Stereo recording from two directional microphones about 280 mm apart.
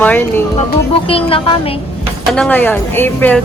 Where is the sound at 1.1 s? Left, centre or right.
Centre.